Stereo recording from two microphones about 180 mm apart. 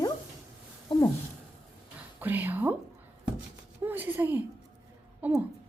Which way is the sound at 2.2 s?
10° right (ahead or behind).